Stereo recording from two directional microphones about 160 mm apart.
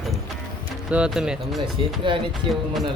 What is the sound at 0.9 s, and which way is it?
Speech, 5° right (ahead or behind).